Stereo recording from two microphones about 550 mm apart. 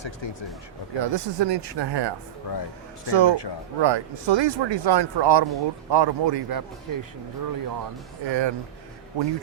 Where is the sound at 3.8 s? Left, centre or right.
Right.